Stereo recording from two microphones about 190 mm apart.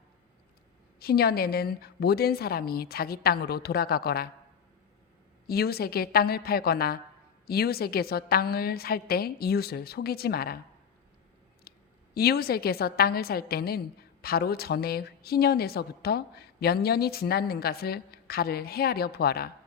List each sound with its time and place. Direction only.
0.9 s a woman's voice: 55° left (ahead or behind)
5.5 s a woman's voice: 55° left (ahead or behind)
11.7 s a sound: 55° left (ahead or behind)
12.1 s a woman's voice: 55° left (ahead or behind)